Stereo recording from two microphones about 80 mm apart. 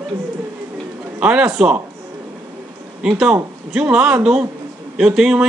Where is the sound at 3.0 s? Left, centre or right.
Centre.